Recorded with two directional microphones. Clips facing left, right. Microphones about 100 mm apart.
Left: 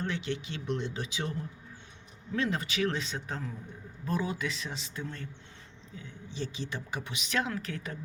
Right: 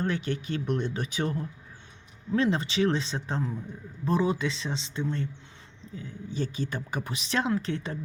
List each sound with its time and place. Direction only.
0.0 s speech: 45° right (ahead or behind)
2.3 s a woman's voice: 30° right (ahead or behind)
6.0 s a woman's voice: 45° right (ahead or behind); by 7.9 s 30° right (ahead or behind)